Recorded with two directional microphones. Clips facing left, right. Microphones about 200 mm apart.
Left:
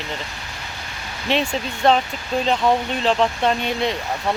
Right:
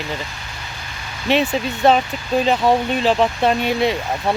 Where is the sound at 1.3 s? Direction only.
5° right (ahead or behind).